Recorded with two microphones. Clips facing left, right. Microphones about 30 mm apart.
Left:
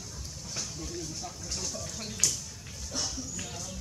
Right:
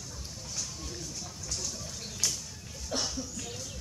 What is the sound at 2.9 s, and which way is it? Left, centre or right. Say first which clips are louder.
Speech: right 3 dB; right.